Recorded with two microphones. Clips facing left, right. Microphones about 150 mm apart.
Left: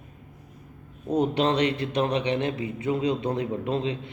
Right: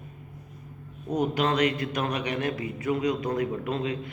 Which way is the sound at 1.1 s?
30° left (ahead or behind).